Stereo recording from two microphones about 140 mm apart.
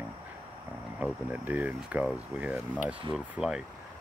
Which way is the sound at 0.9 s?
10° right (ahead or behind).